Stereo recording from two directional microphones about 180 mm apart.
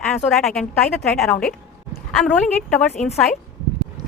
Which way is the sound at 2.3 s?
5° left (ahead or behind).